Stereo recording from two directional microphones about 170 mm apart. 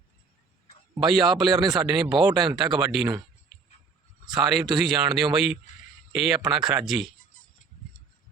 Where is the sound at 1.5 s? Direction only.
25° right (ahead or behind).